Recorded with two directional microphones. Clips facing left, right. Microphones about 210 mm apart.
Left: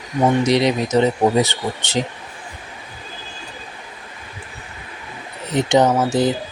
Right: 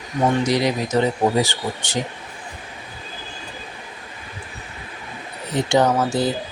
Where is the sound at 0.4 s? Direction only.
20° left (ahead or behind).